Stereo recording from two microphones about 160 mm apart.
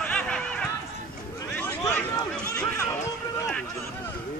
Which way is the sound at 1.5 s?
10° left (ahead or behind).